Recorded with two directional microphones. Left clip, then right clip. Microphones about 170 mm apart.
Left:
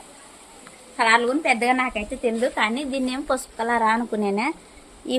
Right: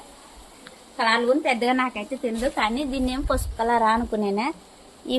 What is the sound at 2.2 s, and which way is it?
Speech, 75° left (ahead or behind).